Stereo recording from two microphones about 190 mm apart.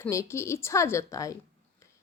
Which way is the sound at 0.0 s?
15° left (ahead or behind).